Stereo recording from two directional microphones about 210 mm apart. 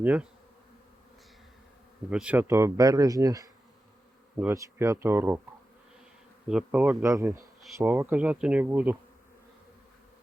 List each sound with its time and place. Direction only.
0.0 s speech: 5° right (ahead or behind)
2.0 s speech: 5° right (ahead or behind)
6.5 s speech: 5° right (ahead or behind)